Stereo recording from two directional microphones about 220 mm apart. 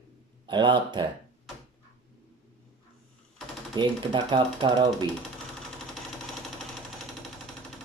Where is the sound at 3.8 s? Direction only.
20° right (ahead or behind).